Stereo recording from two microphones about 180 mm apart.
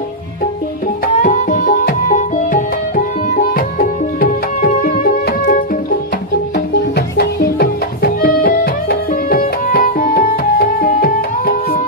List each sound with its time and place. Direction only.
1.0 s music: 45° left (ahead or behind)
7.0 s music: 60° left (ahead or behind)